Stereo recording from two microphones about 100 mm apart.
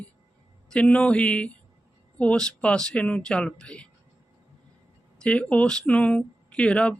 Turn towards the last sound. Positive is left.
turn(degrees=10)  # may be behind; listen again after turning